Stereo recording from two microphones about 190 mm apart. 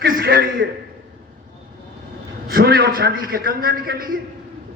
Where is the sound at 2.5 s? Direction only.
55° right (ahead or behind).